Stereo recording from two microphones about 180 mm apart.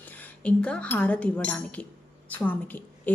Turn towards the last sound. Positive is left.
turn(degrees=10)  # may be behind; listen again after turning